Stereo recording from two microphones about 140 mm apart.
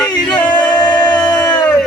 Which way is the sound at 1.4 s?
30° left (ahead or behind).